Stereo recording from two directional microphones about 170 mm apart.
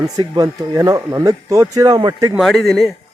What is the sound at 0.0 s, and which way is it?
Speech, 20° right (ahead or behind).